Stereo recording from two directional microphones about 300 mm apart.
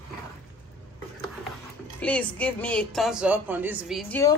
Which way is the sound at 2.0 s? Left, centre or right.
Centre.